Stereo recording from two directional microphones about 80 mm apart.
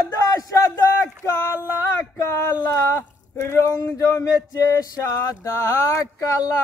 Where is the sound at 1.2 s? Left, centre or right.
Left.